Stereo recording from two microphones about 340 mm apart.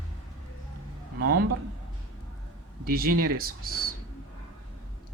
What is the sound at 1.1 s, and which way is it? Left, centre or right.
Speech, right.